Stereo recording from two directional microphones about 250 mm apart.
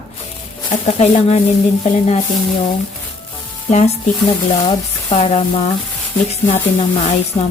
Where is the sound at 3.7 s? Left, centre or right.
Left.